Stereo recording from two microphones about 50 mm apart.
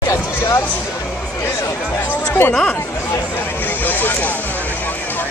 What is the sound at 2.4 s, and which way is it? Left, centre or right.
Speech, left.